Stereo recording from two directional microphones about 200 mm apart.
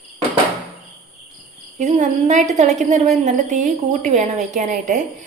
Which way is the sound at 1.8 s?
35° right (ahead or behind).